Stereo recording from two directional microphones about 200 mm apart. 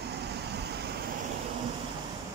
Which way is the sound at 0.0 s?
55° right (ahead or behind).